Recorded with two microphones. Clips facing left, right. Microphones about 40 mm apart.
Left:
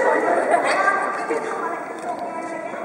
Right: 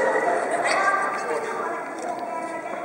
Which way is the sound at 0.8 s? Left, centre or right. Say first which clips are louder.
Left 2 dB; centre.